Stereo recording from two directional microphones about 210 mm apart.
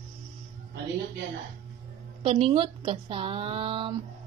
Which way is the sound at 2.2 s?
25° right (ahead or behind).